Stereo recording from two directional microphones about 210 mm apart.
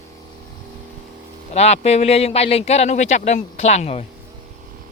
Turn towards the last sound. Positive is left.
turn(degrees=30)  # may be behind; listen again after turning